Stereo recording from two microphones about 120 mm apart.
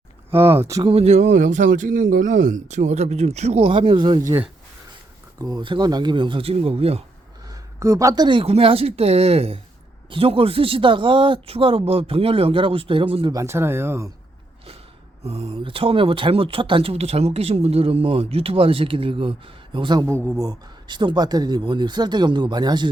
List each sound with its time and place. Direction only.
0.3 s speech: 20° right (ahead or behind)
0.9 s speech: 60° right (ahead or behind)
3.7 s speech: 45° right (ahead or behind)
5.4 s speech: 30° right (ahead or behind); by 7.0 s 55° right (ahead or behind)
7.5 s speech: 25° right (ahead or behind); by 13.3 s 45° right (ahead or behind)
13.3 s speech: 25° right (ahead or behind)
15.2 s speech: 55° right (ahead or behind); by 20.1 s 40° right (ahead or behind)
20.1 s speech: 20° right (ahead or behind)